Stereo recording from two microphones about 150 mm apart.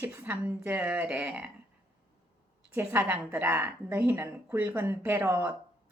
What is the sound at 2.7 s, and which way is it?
A woman's voice, 10° right (ahead or behind).